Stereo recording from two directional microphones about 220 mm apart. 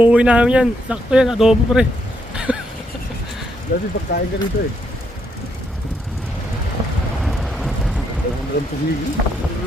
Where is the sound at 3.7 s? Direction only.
40° left (ahead or behind).